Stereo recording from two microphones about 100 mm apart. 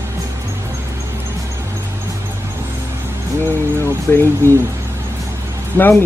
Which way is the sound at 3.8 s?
25° left (ahead or behind).